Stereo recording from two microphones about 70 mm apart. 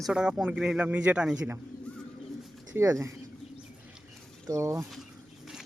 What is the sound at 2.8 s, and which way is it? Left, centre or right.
Speech, right.